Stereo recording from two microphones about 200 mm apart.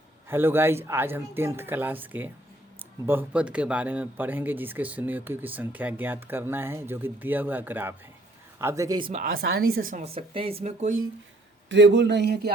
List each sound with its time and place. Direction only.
0.3 s a man's voice: 10° right (ahead or behind)
9.2 s speech: 50° right (ahead or behind)
11.7 s speech: 60° right (ahead or behind)